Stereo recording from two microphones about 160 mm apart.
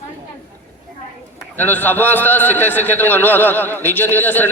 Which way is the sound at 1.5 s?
10° left (ahead or behind).